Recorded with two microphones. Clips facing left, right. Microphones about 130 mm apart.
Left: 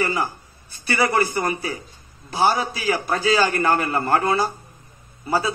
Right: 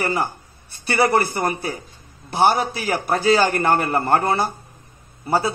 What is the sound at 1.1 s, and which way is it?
Speech, 30° right (ahead or behind).